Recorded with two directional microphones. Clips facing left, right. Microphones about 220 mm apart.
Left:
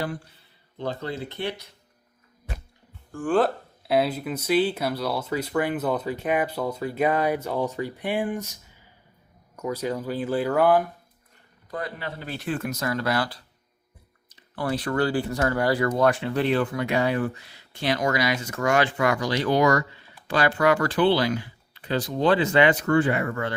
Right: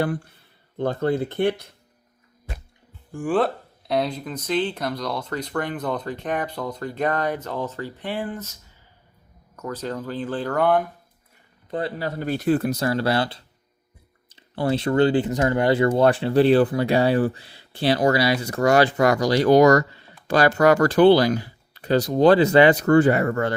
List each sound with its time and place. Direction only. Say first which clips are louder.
0.0 s speech: right 6 dB; 55° right (ahead or behind)
3.1 s speech: right 1 dB; 15° right (ahead or behind)
3.3 s speech: even; centre (ahead or behind)
9.6 s speech: left 2 dB; 10° left (ahead or behind)
11.7 s a man's voice: right 6 dB; 30° right (ahead or behind)
12.0 s speech: right 9 dB; 45° right (ahead or behind)